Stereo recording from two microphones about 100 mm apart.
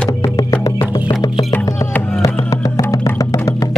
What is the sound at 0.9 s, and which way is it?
Music, 35° left (ahead or behind).